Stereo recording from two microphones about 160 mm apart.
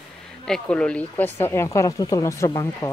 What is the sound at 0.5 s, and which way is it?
Speech, 5° left (ahead or behind).